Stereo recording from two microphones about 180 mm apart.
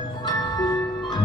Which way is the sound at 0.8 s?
25° left (ahead or behind).